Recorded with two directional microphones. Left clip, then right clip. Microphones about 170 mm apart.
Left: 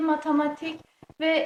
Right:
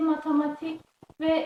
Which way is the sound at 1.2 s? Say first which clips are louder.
Left 1 dB; 45° left (ahead or behind).